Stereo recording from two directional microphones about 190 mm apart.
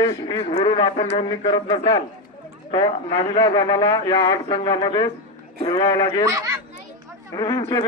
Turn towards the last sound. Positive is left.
turn(degrees=20)  # may be behind; listen again after turning